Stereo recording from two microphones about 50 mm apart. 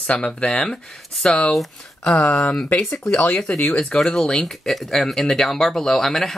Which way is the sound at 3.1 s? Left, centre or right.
Left.